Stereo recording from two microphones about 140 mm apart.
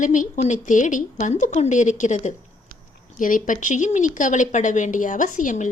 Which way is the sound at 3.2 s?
70° left (ahead or behind).